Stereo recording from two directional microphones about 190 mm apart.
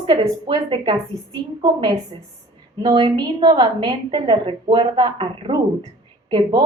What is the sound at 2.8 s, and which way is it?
A woman's voice, 25° right (ahead or behind).